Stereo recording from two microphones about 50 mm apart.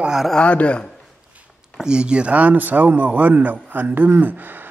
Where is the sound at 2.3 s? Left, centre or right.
Right.